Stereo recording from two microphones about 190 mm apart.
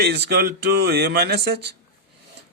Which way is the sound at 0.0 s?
60° right (ahead or behind).